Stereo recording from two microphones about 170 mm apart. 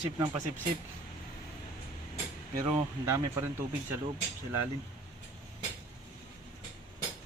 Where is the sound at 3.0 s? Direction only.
15° right (ahead or behind).